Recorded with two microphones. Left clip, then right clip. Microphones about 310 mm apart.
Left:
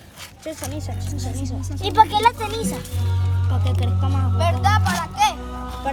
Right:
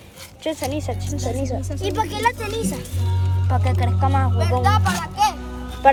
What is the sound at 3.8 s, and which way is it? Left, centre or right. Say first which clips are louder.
Speech: right 7 dB; centre.